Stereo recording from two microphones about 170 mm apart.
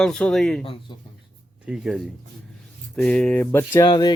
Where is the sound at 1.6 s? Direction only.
5° right (ahead or behind); by 3.8 s 10° left (ahead or behind).